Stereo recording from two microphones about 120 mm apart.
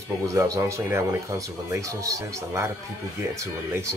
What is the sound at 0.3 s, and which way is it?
Speech, 25° right (ahead or behind).